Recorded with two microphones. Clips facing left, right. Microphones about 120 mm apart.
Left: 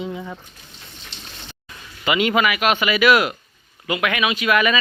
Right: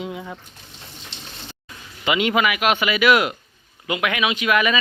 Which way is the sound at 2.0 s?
15° right (ahead or behind).